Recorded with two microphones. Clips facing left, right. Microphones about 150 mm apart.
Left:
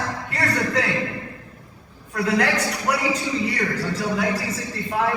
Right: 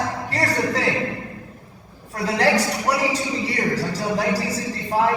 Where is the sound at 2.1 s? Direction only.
30° right (ahead or behind).